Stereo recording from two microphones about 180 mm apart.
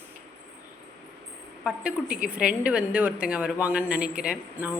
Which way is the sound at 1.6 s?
5° right (ahead or behind).